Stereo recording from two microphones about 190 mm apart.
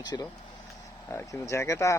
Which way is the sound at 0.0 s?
20° left (ahead or behind).